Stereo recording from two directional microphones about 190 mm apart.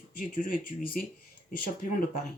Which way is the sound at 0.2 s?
50° left (ahead or behind).